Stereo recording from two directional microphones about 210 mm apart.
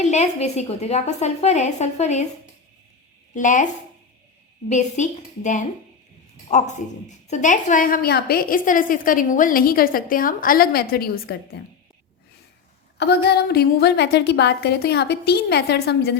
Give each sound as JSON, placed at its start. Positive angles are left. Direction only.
{"t": 0.0, "sound": "a woman's voice", "side_deg": 35}
{"t": 3.3, "sound": "a woman's voice", "side_deg": 35}
{"t": 4.7, "sound": "a woman's voice", "side_deg": 35}
{"t": 13.0, "sound": "a woman's voice", "side_deg": 50}